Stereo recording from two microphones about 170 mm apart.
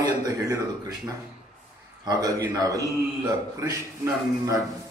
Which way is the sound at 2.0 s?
20° right (ahead or behind).